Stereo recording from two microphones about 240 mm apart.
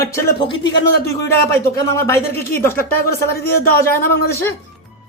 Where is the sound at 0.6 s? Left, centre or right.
Left.